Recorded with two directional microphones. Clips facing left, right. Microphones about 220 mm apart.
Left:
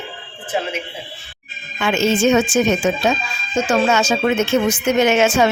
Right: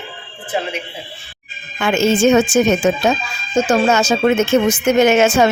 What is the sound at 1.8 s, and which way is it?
Speech, 50° right (ahead or behind).